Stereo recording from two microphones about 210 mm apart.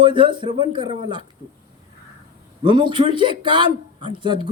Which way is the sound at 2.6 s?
20° right (ahead or behind).